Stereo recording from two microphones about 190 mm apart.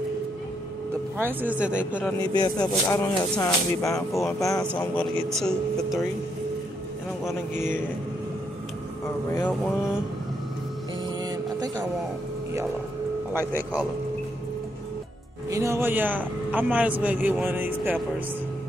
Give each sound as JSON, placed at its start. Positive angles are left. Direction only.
{"t": 1.1, "sound": "a man's voice", "side_deg": -10}
{"t": 2.1, "sound": "speech", "side_deg": 20}
{"t": 4.9, "sound": "speech", "side_deg": 5}
{"t": 7.2, "sound": "speech", "side_deg": 10}
{"t": 11.2, "sound": "music", "side_deg": -20}
{"t": 15.5, "sound": "a man's voice", "side_deg": -15}